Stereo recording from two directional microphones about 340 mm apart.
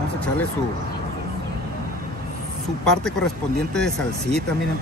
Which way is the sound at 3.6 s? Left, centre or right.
Centre.